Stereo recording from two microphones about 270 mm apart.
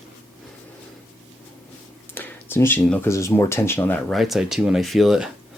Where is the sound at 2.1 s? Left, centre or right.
Centre.